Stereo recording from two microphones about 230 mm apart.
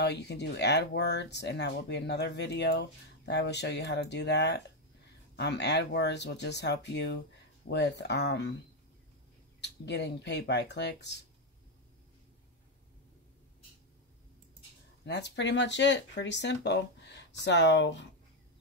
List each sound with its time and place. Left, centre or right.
0.0 s speech: left
9.6 s speech: left
15.0 s speech: left